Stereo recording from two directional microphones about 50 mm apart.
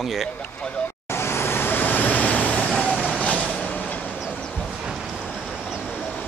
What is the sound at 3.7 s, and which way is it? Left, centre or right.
Train, left.